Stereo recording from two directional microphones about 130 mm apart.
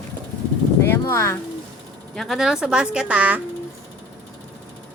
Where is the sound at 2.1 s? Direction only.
Centre (ahead or behind).